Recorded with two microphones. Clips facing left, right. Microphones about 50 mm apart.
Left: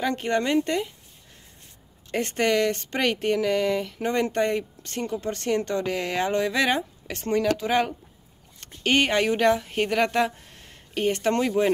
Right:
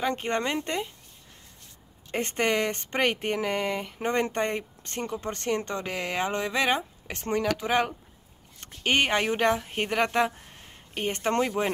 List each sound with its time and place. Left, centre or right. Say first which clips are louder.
0.0 s speech: left 2 dB; centre
2.1 s speech: left 3 dB; centre
4.1 s speech: left 3 dB; right
5.9 s speech: left 4 dB; centre